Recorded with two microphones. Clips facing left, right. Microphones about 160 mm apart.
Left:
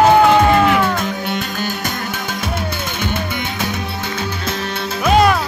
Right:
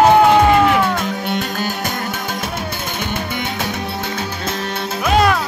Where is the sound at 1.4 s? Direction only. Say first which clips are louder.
Right 1 dB; 40° right (ahead or behind).